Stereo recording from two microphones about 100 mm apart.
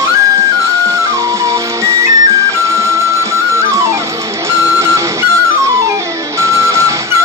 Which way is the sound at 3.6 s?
30° right (ahead or behind).